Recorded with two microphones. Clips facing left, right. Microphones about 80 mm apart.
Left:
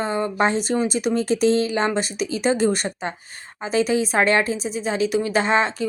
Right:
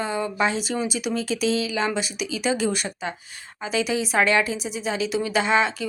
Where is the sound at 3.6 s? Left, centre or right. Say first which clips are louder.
Left 4 dB; left.